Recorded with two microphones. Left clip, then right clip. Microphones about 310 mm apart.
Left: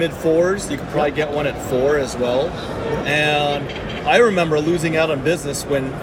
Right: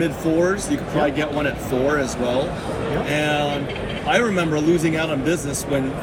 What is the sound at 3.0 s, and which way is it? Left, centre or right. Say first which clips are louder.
A man's voice: left 5 dB; centre.